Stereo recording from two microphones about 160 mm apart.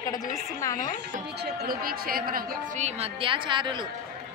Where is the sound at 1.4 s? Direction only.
80° right.